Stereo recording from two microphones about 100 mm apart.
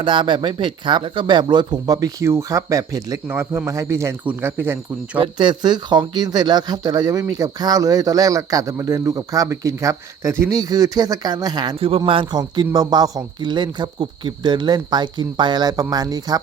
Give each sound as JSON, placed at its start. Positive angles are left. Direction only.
{"t": 0.0, "sound": "speech", "side_deg": -55}
{"t": 3.2, "sound": "speech", "side_deg": -25}
{"t": 4.2, "sound": "speech", "side_deg": -20}
{"t": 5.1, "sound": "speech", "side_deg": -55}
{"t": 11.8, "sound": "a man's voice", "side_deg": -75}